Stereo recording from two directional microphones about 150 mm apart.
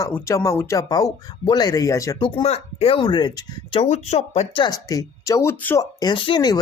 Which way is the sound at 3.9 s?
45° left (ahead or behind).